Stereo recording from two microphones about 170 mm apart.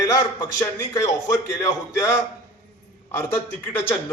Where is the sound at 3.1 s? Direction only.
10° left (ahead or behind).